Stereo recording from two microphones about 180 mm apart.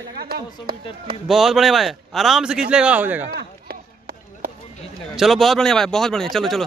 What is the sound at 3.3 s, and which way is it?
Run, 60° right (ahead or behind).